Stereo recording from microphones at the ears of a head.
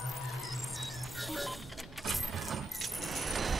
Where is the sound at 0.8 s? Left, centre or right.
Centre.